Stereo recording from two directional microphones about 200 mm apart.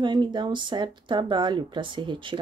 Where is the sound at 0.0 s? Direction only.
20° right (ahead or behind).